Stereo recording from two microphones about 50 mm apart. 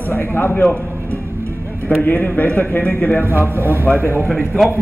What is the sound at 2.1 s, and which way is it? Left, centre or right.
A man's voice, left.